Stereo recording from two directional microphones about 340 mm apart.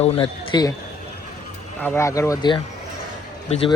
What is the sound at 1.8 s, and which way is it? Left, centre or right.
Speech, centre.